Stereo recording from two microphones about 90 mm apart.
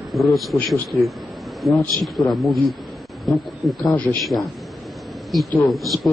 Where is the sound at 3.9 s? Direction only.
15° left (ahead or behind).